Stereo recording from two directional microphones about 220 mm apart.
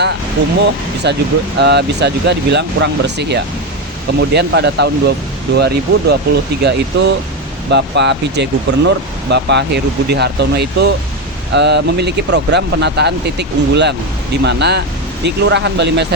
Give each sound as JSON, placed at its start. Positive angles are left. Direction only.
{"t": 0.4, "sound": "speech", "side_deg": -50}